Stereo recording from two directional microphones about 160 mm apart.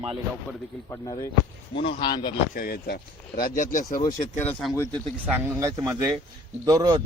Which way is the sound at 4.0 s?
15° left (ahead or behind).